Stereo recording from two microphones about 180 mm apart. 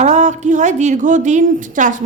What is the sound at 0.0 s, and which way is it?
A woman's voice, 40° right (ahead or behind).